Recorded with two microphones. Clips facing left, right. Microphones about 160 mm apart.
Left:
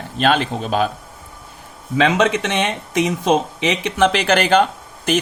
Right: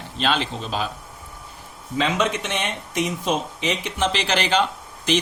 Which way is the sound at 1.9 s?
75° left (ahead or behind).